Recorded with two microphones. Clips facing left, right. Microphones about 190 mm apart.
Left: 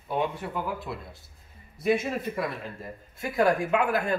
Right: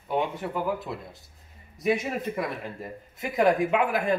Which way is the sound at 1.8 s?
15° right (ahead or behind).